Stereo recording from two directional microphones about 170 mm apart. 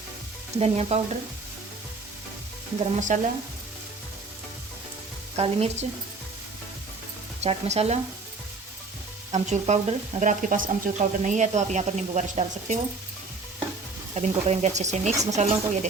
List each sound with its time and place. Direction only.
0.6 s speech: 40° right (ahead or behind)
2.9 s speech: 45° right (ahead or behind)
5.4 s speech: 35° right (ahead or behind)
7.4 s speech: 40° right (ahead or behind)
9.3 s speech: 40° right (ahead or behind)
14.2 s speech: 40° right (ahead or behind)
15.1 s speech: 20° right (ahead or behind)
15.4 s speech: 45° right (ahead or behind)